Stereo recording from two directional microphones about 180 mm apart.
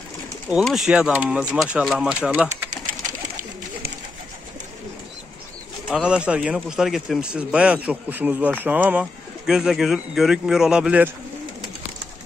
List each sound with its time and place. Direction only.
0.5 s a man's voice: 5° right (ahead or behind)
2.9 s pigeon: 50° right (ahead or behind)
5.9 s a man's voice: 5° right (ahead or behind)